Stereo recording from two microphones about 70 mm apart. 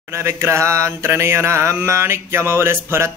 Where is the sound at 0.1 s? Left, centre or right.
Right.